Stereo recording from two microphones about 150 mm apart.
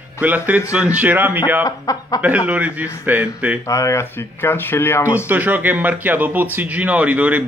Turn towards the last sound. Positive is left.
turn(degrees=-10)  # may be behind; listen again after turning